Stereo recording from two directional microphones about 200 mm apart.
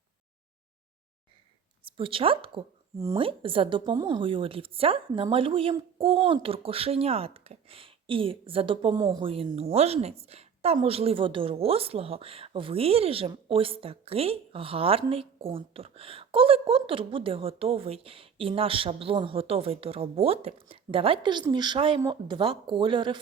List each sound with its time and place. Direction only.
1.8 s speech: 25° right (ahead or behind)